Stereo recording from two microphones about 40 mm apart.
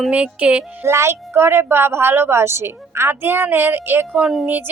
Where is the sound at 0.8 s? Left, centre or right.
Right.